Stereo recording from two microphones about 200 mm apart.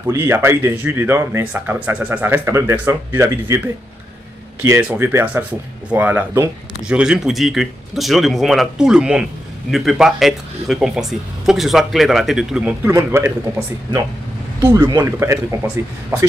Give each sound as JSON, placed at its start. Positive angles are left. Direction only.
{"t": 0.0, "sound": "speech", "side_deg": -10}
{"t": 14.6, "sound": "speech", "side_deg": -15}